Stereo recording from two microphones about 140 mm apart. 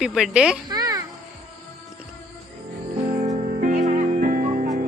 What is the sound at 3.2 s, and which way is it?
Music, 50° right (ahead or behind).